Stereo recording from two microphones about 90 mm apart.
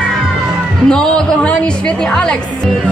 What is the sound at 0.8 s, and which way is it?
Speech, 10° left (ahead or behind).